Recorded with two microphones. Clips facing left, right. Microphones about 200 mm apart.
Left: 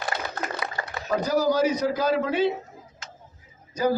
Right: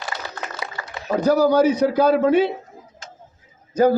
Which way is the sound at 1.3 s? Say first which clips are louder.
Right 7 dB; 60° right (ahead or behind).